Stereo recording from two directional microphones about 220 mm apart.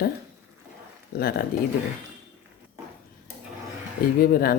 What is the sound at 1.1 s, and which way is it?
Speech, 45° left (ahead or behind).